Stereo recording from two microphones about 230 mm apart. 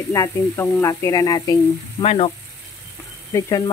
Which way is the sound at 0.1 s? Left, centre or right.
Centre.